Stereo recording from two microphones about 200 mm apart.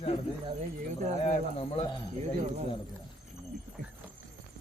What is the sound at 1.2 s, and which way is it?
Speech, 30° left (ahead or behind).